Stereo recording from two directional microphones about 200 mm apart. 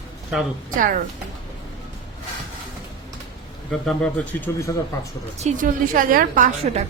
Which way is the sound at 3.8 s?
5° left (ahead or behind).